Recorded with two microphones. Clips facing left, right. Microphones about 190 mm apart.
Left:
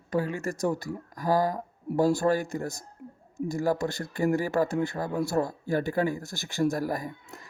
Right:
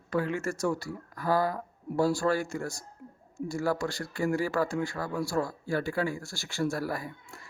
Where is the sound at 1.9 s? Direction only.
20° left (ahead or behind).